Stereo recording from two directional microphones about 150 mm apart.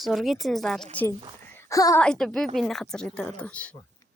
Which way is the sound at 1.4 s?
15° left (ahead or behind).